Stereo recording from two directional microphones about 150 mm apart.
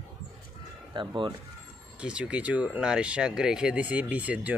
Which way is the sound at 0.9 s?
35° right (ahead or behind).